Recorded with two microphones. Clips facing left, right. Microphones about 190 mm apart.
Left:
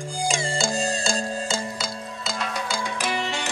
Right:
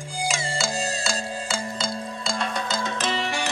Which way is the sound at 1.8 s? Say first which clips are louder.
Right 3 dB; centre (ahead or behind).